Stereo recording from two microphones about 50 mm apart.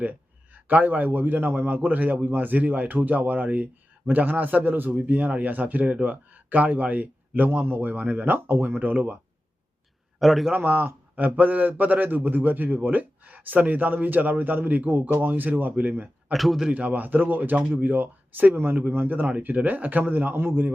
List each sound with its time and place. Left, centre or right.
0.0 s a man's voice: right
7.9 s a man's voice: right
8.4 s a man's voice: right
10.2 s a man's voice: centre
10.6 s a man's voice: right
16.3 s a man's voice: centre
16.9 s a man's voice: right